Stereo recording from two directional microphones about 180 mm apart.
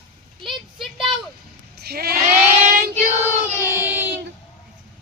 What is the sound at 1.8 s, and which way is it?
Sheep, 60° right (ahead or behind).